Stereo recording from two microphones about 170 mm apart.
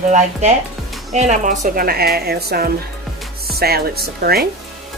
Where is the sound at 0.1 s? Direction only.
40° right (ahead or behind); by 4.5 s 65° right (ahead or behind).